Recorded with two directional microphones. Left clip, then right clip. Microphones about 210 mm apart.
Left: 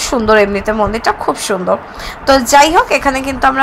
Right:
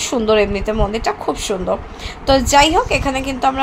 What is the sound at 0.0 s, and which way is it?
A woman's voice, 15° left (ahead or behind).